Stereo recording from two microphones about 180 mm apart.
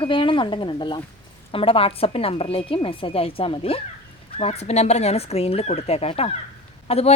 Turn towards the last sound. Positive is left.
turn(degrees=35)  # may be behind; listen again after turning